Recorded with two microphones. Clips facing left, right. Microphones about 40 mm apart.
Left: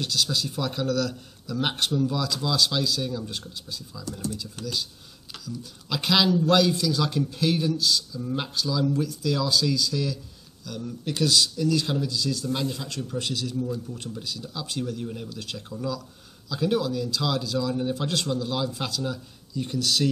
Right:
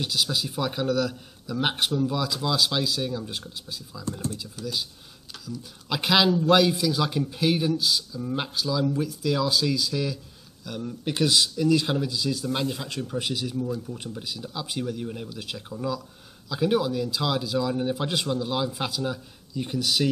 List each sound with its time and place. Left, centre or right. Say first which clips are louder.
0.0 s a man's voice: even; centre
4.6 s speech: right 2 dB; left
5.4 s a man's voice: even; centre